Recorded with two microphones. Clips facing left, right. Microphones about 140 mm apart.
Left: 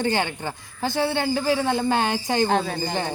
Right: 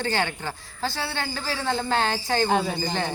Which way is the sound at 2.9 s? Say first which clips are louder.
Left 1 dB; 15° left (ahead or behind).